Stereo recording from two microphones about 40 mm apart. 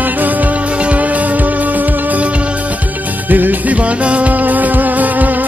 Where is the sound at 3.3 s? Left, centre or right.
Right.